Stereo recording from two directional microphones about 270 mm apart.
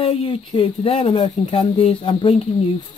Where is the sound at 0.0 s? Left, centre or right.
Left.